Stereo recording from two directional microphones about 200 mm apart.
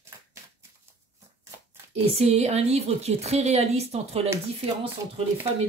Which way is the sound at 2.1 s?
30° right (ahead or behind).